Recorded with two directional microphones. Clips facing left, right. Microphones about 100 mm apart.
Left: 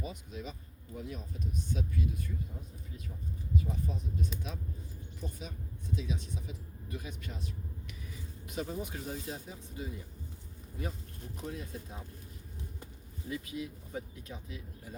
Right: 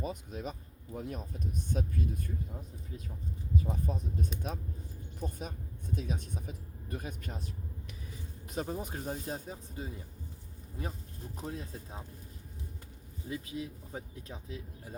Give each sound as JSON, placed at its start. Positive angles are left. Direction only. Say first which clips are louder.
{"t": 0.0, "sound": "speech", "louder": "right 4 dB", "side_deg": -45}
{"t": 3.6, "sound": "speech", "louder": "right 2 dB", "side_deg": -40}
{"t": 11.4, "sound": "speech", "louder": "even", "side_deg": -35}
{"t": 13.3, "sound": "speech", "louder": "even", "side_deg": -30}